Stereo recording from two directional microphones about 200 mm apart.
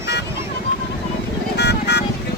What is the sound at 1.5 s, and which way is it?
Vehicle, 55° left (ahead or behind).